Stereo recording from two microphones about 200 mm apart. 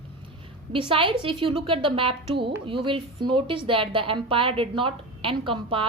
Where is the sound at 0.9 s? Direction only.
25° right (ahead or behind).